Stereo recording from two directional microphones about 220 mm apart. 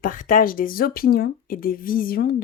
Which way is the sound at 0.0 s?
40° left (ahead or behind).